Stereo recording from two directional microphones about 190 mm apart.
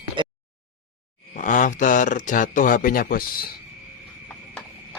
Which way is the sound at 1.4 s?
45° left (ahead or behind).